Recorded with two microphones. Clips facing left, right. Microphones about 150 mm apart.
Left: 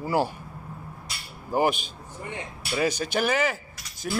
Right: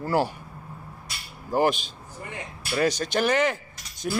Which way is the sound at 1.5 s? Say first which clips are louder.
Right 1 dB; 10° left (ahead or behind).